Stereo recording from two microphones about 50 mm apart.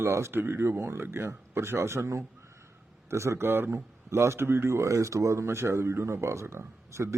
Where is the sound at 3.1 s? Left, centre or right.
Right.